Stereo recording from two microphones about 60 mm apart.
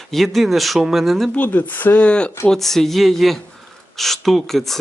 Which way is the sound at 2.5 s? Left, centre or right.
Centre.